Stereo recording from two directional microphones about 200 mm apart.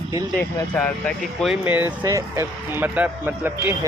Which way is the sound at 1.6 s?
10° right (ahead or behind).